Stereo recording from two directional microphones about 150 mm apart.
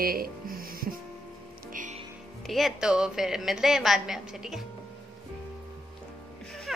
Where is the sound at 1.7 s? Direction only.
55° right (ahead or behind).